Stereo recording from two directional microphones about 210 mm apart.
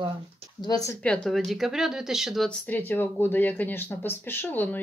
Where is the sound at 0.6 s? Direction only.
15° left (ahead or behind).